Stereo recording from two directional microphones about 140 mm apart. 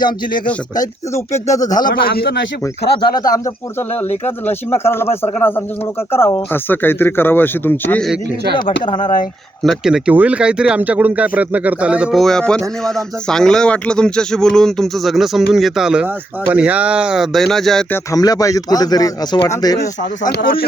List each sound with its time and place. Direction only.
0.8 s speech: 25° left (ahead or behind)
1.7 s speech: 80° left
3.3 s a man's voice: 20° left (ahead or behind)
8.5 s speech: 35° left (ahead or behind)
9.6 s speech: 5° right (ahead or behind)
17.9 s speech: 25° left (ahead or behind)
20.0 s speech: 80° left